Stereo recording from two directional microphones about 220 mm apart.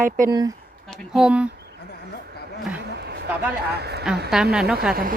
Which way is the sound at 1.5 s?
45° right (ahead or behind).